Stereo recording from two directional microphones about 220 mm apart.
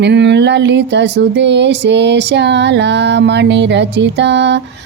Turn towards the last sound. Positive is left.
turn(degrees=-55)  # may be behind; listen again after turning